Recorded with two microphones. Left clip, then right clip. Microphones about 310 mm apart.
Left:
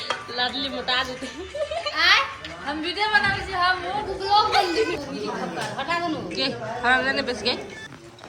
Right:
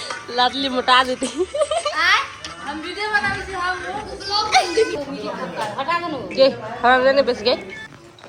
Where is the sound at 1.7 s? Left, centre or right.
Right.